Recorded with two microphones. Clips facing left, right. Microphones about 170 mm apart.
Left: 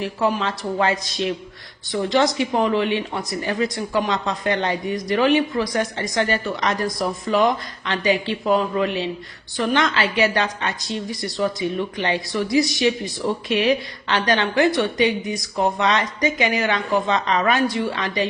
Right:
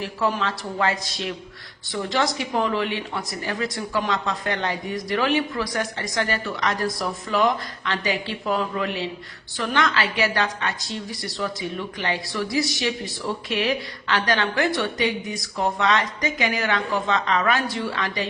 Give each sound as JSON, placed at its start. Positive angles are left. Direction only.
{"t": 0.0, "sound": "a woman's voice", "side_deg": 15}